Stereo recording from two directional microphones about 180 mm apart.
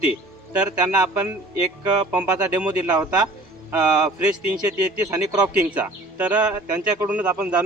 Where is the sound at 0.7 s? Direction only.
20° right (ahead or behind).